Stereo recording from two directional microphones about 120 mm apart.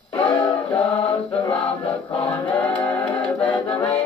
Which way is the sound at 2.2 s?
15° left (ahead or behind).